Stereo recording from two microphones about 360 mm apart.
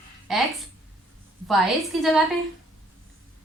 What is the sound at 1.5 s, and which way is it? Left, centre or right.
Speech, centre.